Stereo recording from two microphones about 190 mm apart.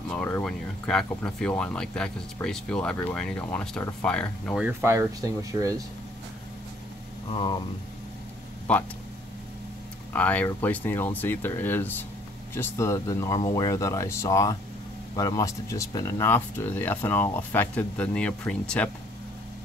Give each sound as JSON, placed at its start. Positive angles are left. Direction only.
{"t": 0.2, "sound": "speech", "side_deg": 5}
{"t": 4.6, "sound": "speech", "side_deg": -15}
{"t": 7.2, "sound": "speech", "side_deg": 25}
{"t": 8.7, "sound": "speech", "side_deg": 5}
{"t": 10.1, "sound": "speech", "side_deg": 10}